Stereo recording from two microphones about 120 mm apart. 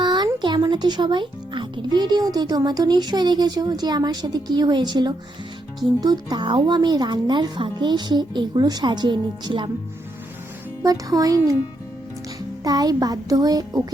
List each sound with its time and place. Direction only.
0.0 s a sound: 40° right (ahead or behind)
0.4 s speech: 40° right (ahead or behind)
10.8 s speech: 30° right (ahead or behind)
12.6 s speech: 30° right (ahead or behind)